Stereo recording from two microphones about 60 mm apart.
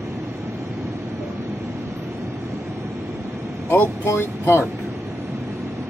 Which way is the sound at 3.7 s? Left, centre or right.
Left.